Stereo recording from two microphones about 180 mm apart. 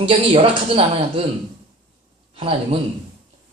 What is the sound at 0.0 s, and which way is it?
Speech, 30° right (ahead or behind).